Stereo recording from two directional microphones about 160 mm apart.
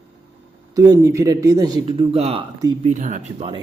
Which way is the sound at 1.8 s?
40° right (ahead or behind).